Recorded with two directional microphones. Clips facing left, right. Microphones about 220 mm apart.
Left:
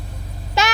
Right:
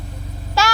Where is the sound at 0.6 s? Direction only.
20° left (ahead or behind).